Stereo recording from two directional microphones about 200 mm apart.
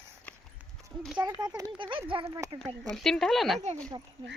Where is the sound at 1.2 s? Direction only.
20° right (ahead or behind).